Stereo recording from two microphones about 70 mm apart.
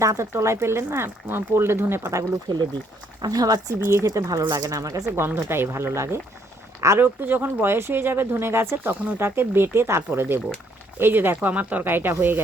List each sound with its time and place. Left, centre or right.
0.0 s speech: right
2.5 s speech: right
3.2 s speech: right
3.8 s speech: right
4.4 s speech: right
5.1 s speech: right
7.0 s speech: right